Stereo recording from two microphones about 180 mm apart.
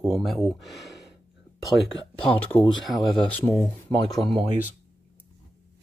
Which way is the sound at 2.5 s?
15° left (ahead or behind).